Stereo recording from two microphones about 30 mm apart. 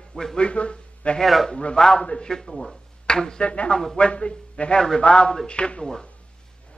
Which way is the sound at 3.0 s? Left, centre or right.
Left.